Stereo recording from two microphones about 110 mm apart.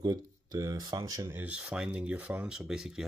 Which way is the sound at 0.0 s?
35° right (ahead or behind).